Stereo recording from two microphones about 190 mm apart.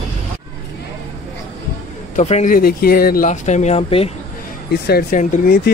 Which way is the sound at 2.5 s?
50° left (ahead or behind).